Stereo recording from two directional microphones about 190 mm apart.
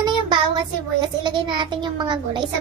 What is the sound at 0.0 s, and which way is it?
A child's voice, 25° right (ahead or behind).